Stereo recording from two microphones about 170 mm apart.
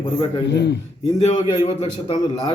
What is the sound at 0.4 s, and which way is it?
Speech, 85° left.